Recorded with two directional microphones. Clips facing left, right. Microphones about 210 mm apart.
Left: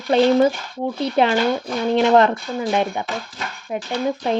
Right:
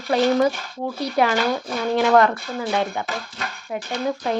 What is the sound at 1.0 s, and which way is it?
Speech, 25° left (ahead or behind).